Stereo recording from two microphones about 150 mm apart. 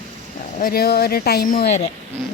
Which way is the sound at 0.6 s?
85° left.